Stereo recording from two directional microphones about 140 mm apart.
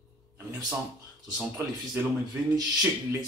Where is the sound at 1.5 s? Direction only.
15° right (ahead or behind).